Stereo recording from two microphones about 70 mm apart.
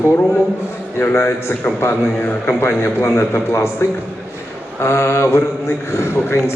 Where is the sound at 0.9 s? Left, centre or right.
Left.